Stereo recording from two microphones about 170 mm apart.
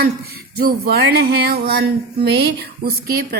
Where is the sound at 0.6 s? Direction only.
65° right (ahead or behind).